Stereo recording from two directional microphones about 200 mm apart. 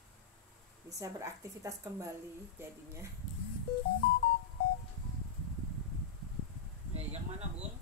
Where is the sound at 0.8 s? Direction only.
15° right (ahead or behind).